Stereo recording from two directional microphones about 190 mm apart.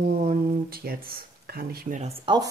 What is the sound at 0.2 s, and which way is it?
Speech, 50° right (ahead or behind).